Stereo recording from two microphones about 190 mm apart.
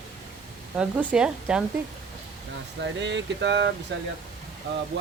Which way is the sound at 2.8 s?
70° right (ahead or behind).